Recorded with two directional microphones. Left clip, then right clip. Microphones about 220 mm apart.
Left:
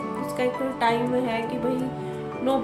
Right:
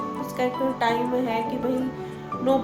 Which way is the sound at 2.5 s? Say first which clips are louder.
Right 2 dB; 5° left (ahead or behind).